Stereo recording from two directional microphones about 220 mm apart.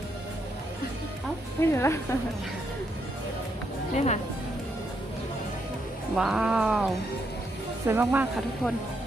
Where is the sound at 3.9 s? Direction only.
30° left (ahead or behind).